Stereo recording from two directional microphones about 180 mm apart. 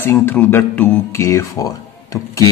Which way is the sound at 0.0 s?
10° left (ahead or behind).